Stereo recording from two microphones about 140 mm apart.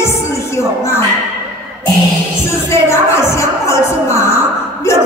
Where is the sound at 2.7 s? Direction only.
20° left (ahead or behind).